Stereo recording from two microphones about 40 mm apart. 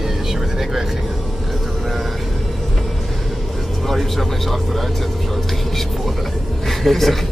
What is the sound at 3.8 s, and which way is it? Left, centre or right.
Speech, centre.